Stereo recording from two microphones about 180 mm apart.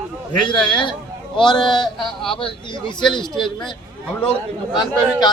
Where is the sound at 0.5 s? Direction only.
25° left (ahead or behind).